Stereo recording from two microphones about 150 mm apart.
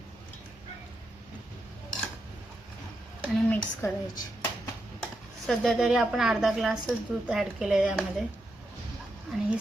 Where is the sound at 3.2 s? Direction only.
10° left (ahead or behind).